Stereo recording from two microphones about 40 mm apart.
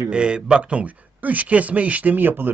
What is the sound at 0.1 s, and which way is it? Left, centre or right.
A man's voice, right.